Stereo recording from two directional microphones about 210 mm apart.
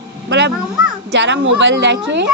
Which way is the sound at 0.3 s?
55° right (ahead or behind).